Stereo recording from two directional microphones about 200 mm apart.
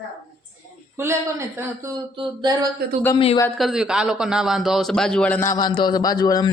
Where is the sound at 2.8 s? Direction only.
50° right (ahead or behind).